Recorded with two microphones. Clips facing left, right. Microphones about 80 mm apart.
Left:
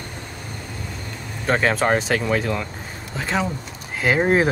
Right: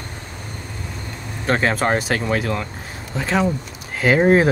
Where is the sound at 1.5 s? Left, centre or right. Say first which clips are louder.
Even; centre.